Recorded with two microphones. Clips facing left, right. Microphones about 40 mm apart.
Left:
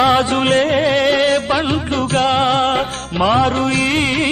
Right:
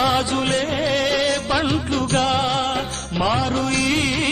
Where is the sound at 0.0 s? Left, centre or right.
Left.